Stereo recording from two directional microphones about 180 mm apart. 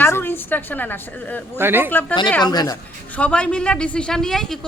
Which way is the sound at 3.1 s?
5° left (ahead or behind).